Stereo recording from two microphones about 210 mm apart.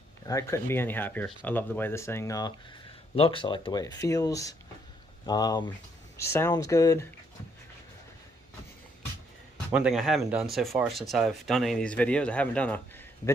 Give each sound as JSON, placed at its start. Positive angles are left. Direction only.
{"t": 0.3, "sound": "speech", "side_deg": 15}
{"t": 9.7, "sound": "speech", "side_deg": 0}